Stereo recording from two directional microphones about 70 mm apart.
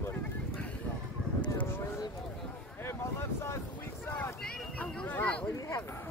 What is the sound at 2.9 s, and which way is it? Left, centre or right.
Vehicle, left.